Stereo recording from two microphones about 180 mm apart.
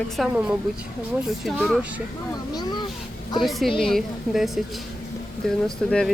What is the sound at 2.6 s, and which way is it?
Speech, 25° left (ahead or behind).